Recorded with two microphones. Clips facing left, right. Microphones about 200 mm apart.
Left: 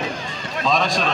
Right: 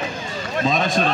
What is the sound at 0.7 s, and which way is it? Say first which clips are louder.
Speech: even; 55° right (ahead or behind).